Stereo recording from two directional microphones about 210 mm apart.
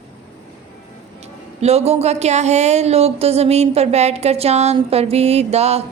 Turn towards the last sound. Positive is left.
turn(degrees=-30)  # may be behind; listen again after turning